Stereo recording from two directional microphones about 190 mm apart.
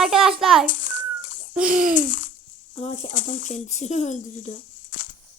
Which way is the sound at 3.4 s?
40° left (ahead or behind).